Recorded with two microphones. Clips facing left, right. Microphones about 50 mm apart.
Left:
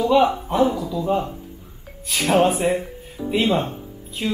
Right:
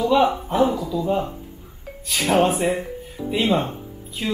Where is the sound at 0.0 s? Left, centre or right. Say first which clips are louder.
Left 1 dB; centre.